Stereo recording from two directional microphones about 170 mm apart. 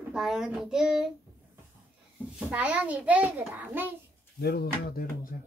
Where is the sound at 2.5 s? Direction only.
5° right (ahead or behind).